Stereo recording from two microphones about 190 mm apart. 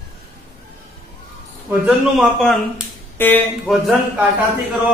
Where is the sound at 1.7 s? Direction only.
5° right (ahead or behind).